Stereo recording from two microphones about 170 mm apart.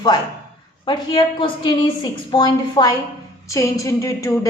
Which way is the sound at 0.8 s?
25° left (ahead or behind).